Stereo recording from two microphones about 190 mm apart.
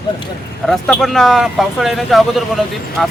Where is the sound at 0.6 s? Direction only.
Centre (ahead or behind).